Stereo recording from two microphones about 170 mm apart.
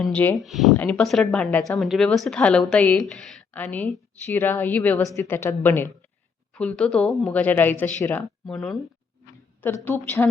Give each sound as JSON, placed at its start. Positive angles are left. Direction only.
{"t": 0.0, "sound": "a woman's voice", "side_deg": 10}